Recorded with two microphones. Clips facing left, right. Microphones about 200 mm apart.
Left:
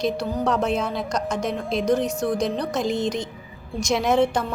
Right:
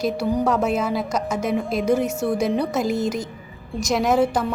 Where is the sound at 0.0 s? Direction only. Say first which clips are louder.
Right 2 dB; 10° right (ahead or behind).